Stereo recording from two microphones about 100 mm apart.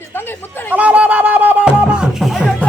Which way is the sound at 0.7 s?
15° right (ahead or behind).